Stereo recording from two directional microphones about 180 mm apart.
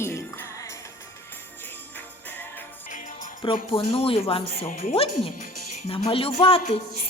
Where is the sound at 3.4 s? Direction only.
30° left (ahead or behind).